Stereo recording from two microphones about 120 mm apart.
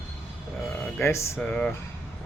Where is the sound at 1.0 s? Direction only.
25° left (ahead or behind).